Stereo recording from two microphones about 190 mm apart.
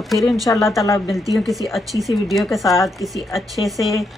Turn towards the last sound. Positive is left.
turn(degrees=0)  # may be behind; listen again after turning